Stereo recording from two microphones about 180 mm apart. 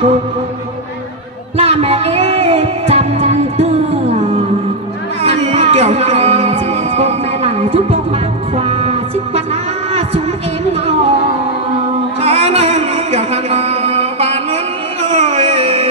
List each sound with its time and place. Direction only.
1.6 s music: 35° right (ahead or behind)
5.2 s music: 35° right (ahead or behind)
10.7 s music: 35° right (ahead or behind)